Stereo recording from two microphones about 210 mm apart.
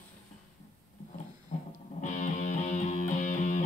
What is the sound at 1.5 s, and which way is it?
Music, 35° left (ahead or behind).